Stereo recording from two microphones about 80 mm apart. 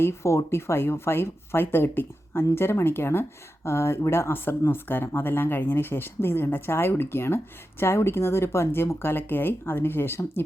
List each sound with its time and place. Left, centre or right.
0.0 s speech: left